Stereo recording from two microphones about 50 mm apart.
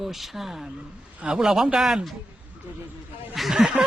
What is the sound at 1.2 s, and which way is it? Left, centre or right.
Speech, centre.